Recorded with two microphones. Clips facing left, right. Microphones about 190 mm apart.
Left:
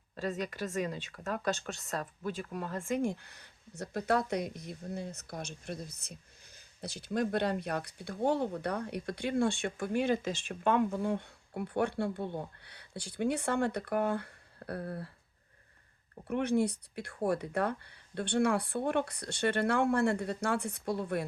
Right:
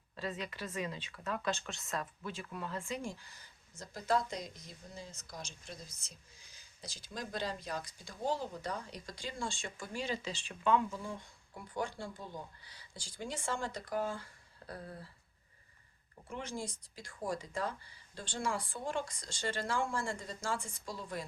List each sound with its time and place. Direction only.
0.2 s speech: 45° left (ahead or behind); by 15.1 s 65° left (ahead or behind)
16.2 s speech: 65° left (ahead or behind)